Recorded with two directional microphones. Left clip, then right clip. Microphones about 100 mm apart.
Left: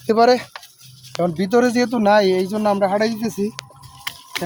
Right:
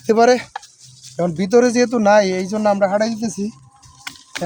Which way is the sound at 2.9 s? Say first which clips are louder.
Right 1 dB; 25° right (ahead or behind).